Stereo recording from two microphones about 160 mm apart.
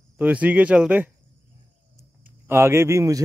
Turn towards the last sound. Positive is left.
turn(degrees=-15)  # may be behind; listen again after turning